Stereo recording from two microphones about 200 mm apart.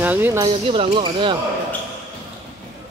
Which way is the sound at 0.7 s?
25° right (ahead or behind).